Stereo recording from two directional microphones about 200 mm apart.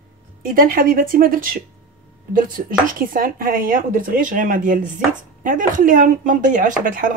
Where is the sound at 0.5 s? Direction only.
45° right (ahead or behind).